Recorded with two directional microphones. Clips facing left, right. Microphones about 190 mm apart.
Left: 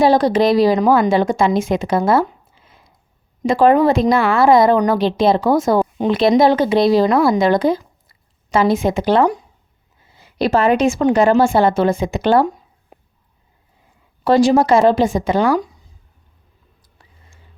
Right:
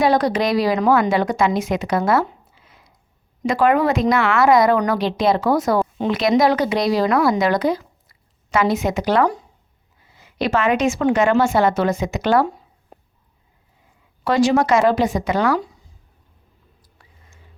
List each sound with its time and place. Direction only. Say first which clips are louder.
0.0 s a woman's voice: left 4 dB; 30° left (ahead or behind)
14.3 s speech: left 4 dB; 30° left (ahead or behind)
17.0 s a sound: left 2 dB; 30° left (ahead or behind)